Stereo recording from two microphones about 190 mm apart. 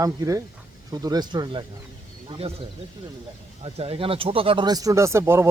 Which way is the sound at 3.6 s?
30° right (ahead or behind).